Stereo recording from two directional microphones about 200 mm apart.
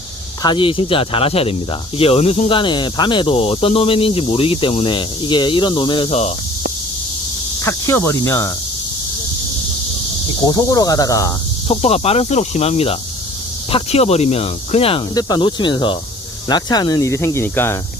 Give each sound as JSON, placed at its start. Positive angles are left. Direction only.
{"t": 0.4, "sound": "speech", "side_deg": 25}
{"t": 7.6, "sound": "speech", "side_deg": 10}
{"t": 10.4, "sound": "speech", "side_deg": 20}
{"t": 11.7, "sound": "speech", "side_deg": 30}